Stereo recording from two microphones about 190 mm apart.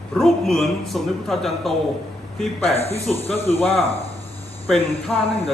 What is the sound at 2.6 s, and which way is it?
Speech, 35° left (ahead or behind).